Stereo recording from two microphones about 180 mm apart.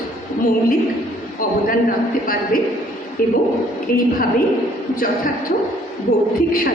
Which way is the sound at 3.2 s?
50° left (ahead or behind).